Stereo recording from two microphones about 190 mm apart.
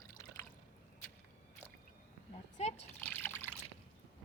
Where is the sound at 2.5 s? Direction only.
35° left (ahead or behind).